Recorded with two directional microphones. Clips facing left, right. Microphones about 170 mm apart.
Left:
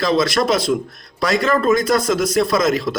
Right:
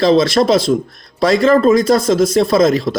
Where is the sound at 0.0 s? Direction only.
30° right (ahead or behind).